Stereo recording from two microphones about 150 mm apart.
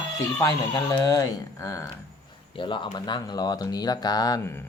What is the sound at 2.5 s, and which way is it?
Speech, 35° left (ahead or behind).